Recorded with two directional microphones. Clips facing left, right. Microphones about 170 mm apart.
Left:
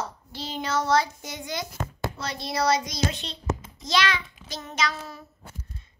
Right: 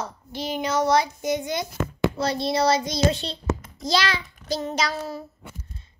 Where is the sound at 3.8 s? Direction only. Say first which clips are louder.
Right 1 dB; 35° right (ahead or behind).